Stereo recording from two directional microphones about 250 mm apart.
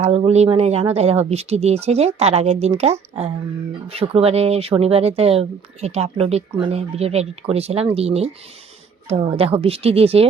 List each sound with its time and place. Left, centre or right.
0.0 s speech: right